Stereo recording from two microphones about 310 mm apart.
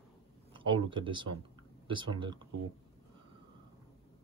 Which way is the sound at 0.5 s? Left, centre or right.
Centre.